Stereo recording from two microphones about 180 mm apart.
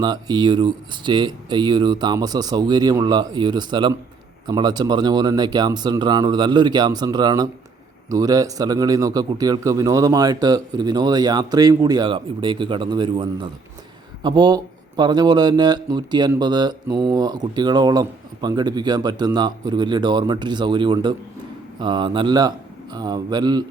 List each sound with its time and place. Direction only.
0.0 s a man's voice: 25° right (ahead or behind)